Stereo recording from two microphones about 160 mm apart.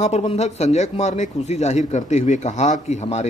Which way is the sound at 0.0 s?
45° left (ahead or behind).